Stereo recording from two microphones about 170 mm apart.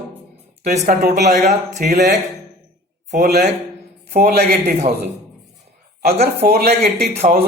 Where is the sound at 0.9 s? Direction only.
70° right (ahead or behind).